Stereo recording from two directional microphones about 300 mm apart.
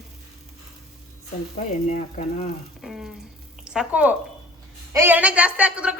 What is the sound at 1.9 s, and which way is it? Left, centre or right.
Speech, left.